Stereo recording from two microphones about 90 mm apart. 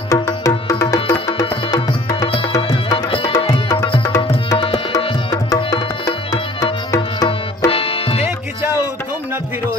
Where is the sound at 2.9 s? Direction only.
75° left (ahead or behind).